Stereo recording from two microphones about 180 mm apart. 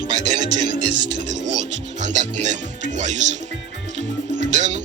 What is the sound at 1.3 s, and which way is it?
Speech, 40° right (ahead or behind).